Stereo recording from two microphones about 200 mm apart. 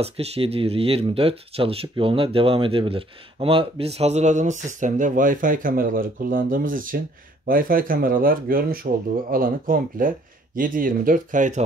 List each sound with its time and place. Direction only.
0.0 s speech: 30° right (ahead or behind)